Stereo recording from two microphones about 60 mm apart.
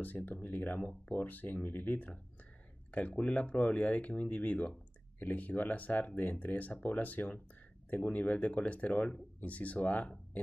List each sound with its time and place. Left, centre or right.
0.0 s speech: left